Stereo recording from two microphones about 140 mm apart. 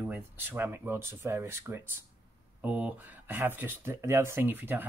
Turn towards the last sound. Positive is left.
turn(degrees=-15)  # may be behind; listen again after turning